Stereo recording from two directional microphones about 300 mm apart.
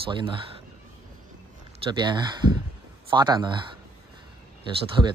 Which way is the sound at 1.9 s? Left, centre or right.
Centre.